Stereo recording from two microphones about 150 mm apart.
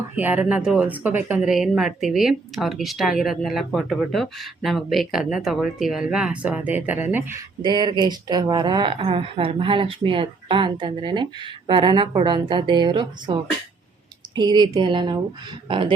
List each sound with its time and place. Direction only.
0.2 s speech: 10° right (ahead or behind)
7.6 s speech: 30° right (ahead or behind)